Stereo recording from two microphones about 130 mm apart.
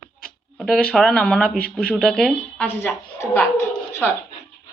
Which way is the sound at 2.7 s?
15° left (ahead or behind).